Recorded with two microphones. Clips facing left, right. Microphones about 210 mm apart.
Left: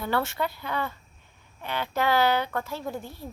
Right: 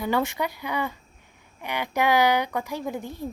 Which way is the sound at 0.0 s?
15° right (ahead or behind).